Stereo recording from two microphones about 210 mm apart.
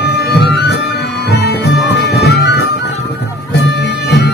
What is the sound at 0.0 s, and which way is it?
Music, 50° left (ahead or behind).